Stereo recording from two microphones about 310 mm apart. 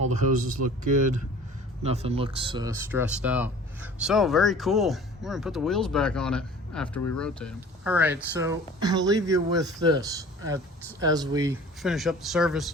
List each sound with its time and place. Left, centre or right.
0.0 s speech: right
11.8 s speech: centre